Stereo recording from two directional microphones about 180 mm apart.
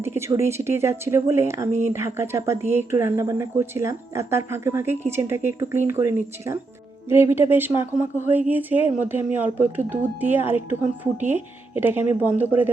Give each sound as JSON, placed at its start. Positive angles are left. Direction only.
{"t": 0.0, "sound": "speech", "side_deg": -15}